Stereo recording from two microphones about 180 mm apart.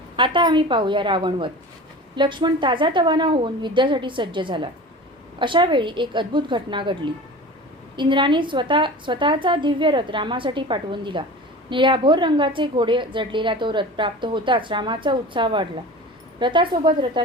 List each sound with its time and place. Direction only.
0.2 s a woman's voice: 25° right (ahead or behind)